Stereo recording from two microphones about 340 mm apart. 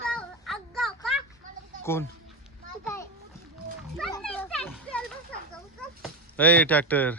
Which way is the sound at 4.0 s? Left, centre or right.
Centre.